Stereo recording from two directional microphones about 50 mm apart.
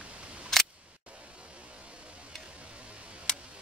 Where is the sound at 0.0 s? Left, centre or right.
Right.